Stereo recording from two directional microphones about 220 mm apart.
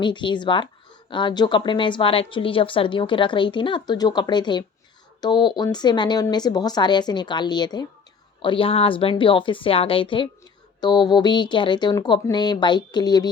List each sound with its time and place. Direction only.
0.0 s a woman's voice: 20° left (ahead or behind)